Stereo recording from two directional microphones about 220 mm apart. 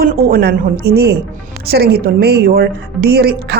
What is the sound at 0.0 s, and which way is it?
A woman's voice, 40° right (ahead or behind).